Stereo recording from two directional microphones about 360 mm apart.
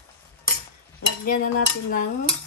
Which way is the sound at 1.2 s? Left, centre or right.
Left.